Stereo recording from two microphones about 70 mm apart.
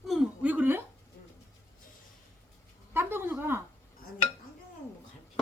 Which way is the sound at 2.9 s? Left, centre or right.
Right.